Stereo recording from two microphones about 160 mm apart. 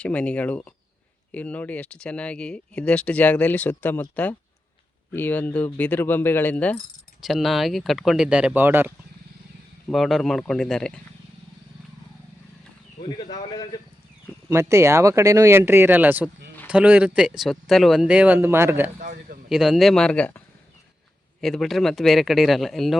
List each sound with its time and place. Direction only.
0.0 s speech: 10° left (ahead or behind); by 8.9 s 15° right (ahead or behind)
9.9 s speech: centre (ahead or behind)
13.0 s speech: 30° left (ahead or behind)
14.5 s speech: 15° right (ahead or behind)
19.5 s speech: centre (ahead or behind)
21.4 s speech: centre (ahead or behind)